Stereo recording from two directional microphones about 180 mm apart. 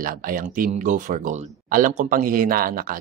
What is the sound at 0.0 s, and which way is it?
Speech, 50° right (ahead or behind).